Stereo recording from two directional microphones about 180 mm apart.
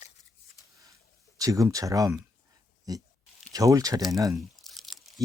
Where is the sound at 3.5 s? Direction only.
20° right (ahead or behind).